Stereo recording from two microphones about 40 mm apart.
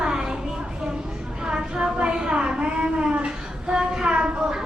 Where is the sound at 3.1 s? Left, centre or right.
Right.